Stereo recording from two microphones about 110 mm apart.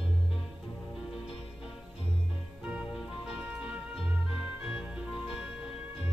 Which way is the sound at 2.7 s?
10° right (ahead or behind).